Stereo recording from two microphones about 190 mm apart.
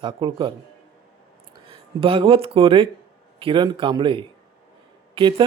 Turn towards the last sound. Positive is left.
turn(degrees=-25)  # may be behind; listen again after turning